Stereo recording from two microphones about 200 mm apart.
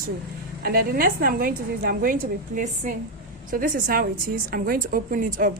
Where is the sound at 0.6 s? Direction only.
50° right (ahead or behind).